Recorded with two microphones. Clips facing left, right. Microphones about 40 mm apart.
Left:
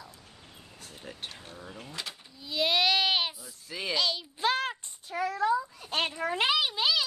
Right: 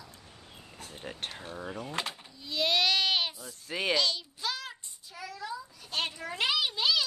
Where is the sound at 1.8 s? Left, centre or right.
Right.